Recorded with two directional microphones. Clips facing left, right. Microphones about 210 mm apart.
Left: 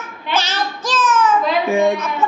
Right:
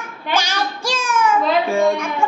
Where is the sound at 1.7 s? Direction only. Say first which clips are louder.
Left 4 dB; 15° left (ahead or behind).